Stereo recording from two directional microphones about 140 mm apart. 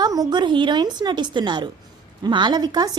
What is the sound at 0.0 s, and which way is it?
Speech, 30° right (ahead or behind).